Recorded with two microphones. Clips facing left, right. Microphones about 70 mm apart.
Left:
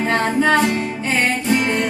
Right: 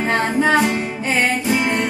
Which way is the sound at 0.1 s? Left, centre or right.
Centre.